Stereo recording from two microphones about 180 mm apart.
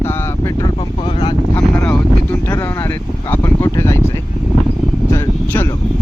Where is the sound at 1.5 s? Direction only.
10° left (ahead or behind).